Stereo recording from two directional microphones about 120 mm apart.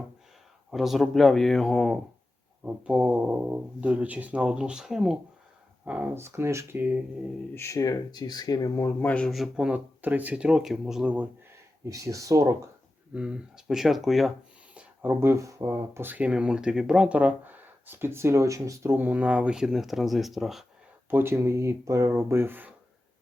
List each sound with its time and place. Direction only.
0.7 s speech: centre (ahead or behind)
2.6 s speech: 10° right (ahead or behind)
6.1 s speech: 20° right (ahead or behind)
7.5 s speech: 20° left (ahead or behind)
9.3 s speech: 5° right (ahead or behind)
11.9 s speech: 25° right (ahead or behind)
13.1 s speech: 5° right (ahead or behind)
14.8 s speech: 20° right (ahead or behind); by 20.7 s centre (ahead or behind)
21.1 s speech: 20° right (ahead or behind)